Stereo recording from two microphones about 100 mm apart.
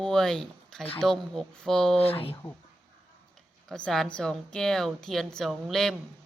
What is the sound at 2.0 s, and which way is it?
Speech, 70° left (ahead or behind).